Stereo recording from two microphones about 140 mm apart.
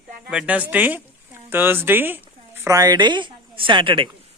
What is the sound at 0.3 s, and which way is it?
Speech, 5° right (ahead or behind).